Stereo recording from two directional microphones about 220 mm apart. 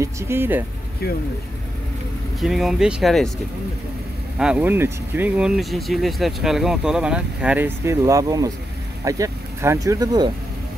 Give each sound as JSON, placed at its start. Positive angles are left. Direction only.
{"t": 0.0, "sound": "speech", "side_deg": -10}
{"t": 1.0, "sound": "speech", "side_deg": 45}
{"t": 2.4, "sound": "speech", "side_deg": 0}
{"t": 4.4, "sound": "speech", "side_deg": -5}